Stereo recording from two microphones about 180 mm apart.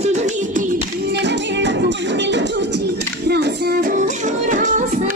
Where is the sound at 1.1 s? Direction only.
80° right.